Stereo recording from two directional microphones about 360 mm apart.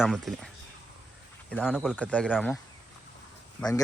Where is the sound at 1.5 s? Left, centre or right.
Centre.